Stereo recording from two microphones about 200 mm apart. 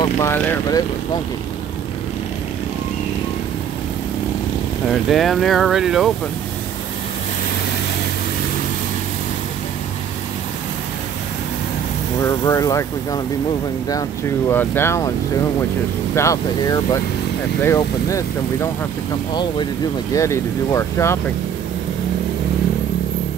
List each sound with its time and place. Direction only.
0.0 s speech: 15° left (ahead or behind)
5.1 s speech: centre (ahead or behind)
12.2 s speech: 15° left (ahead or behind)
14.5 s speech: 10° left (ahead or behind)
16.2 s speech: 15° left (ahead or behind)
20.2 s speech: 15° left (ahead or behind)